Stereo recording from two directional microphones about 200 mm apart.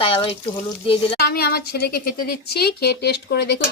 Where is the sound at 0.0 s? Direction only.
25° left (ahead or behind).